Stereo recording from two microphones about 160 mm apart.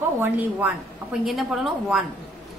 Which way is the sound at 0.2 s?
10° right (ahead or behind).